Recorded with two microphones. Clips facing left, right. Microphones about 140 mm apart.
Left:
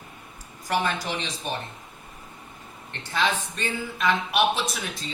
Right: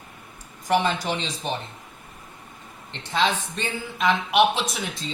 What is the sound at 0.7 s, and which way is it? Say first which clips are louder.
Speech: right 4 dB; 25° right (ahead or behind).